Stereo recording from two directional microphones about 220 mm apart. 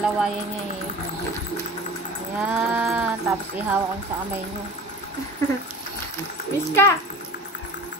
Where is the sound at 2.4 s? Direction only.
5° right (ahead or behind).